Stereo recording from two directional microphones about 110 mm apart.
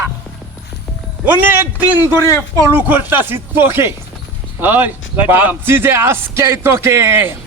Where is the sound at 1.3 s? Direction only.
20° right (ahead or behind).